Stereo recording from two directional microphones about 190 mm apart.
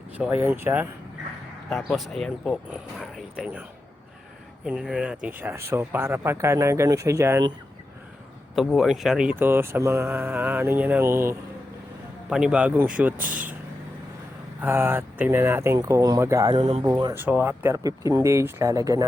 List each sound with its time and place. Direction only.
0.2 s speech: 10° right (ahead or behind)
1.7 s speech: centre (ahead or behind)
4.6 s speech: 5° right (ahead or behind)
8.5 s speech: centre (ahead or behind)
13.1 s vehicle: 45° right (ahead or behind)
14.6 s speech: 10° right (ahead or behind)
17.2 s speech: 10° right (ahead or behind)